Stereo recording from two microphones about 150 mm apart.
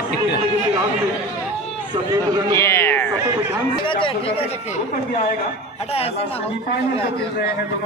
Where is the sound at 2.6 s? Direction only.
15° left (ahead or behind).